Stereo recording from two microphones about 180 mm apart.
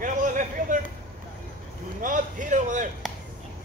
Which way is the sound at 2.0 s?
45° right (ahead or behind).